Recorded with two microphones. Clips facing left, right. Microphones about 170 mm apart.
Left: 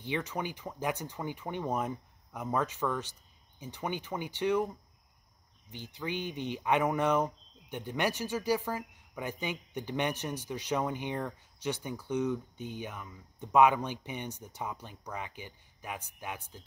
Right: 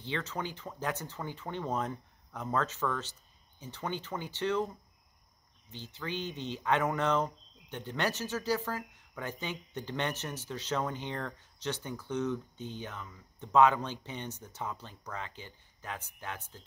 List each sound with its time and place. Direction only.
0.0 s speech: 15° left (ahead or behind)
5.7 s speech: 15° left (ahead or behind)